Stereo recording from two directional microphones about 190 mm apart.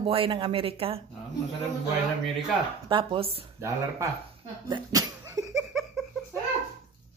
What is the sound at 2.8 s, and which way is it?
Speech, 25° right (ahead or behind).